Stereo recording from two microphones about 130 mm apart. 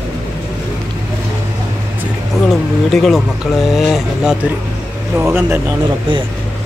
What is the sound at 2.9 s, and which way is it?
Speech, centre (ahead or behind).